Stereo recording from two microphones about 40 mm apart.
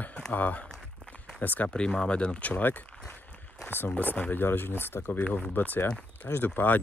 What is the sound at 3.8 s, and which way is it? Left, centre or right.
Speech, left.